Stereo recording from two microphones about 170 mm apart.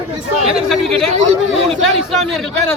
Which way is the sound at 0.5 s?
Centre (ahead or behind).